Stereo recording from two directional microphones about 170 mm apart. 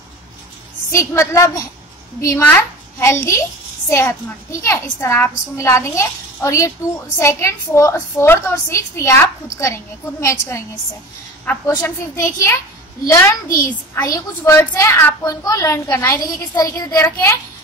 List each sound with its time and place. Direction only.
0.9 s a woman's voice: 15° left (ahead or behind)
10.2 s a woman's voice: 15° left (ahead or behind)
13.5 s a child's voice: 55° left (ahead or behind)
13.9 s a woman's voice: 15° left (ahead or behind)